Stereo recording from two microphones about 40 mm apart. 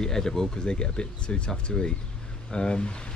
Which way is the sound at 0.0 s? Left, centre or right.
Centre.